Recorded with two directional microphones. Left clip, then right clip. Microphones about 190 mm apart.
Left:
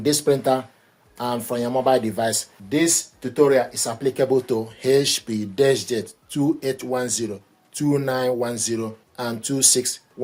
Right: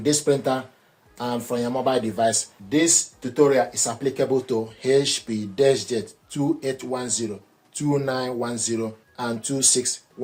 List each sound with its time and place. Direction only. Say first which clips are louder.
0.0 s speech: left 2 dB; 40° left (ahead or behind)